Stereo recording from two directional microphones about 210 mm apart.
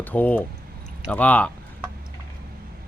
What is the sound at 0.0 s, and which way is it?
Speech, 10° left (ahead or behind).